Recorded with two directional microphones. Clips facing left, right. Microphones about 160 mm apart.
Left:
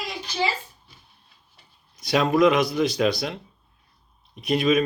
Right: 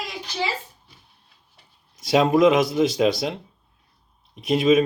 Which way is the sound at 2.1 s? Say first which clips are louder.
Right 2 dB; 20° right (ahead or behind).